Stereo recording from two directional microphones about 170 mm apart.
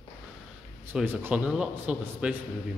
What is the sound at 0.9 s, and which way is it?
Speech, 10° right (ahead or behind).